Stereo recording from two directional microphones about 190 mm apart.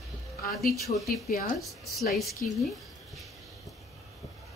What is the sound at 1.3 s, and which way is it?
Speech, 55° left (ahead or behind).